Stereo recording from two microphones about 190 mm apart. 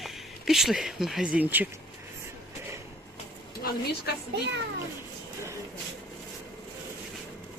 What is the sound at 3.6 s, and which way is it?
Speech, 50° left (ahead or behind).